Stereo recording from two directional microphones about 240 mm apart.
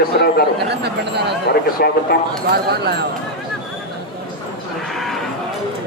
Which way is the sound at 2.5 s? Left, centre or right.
Right.